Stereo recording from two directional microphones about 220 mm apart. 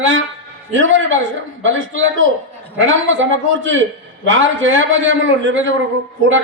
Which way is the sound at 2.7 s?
60° right (ahead or behind).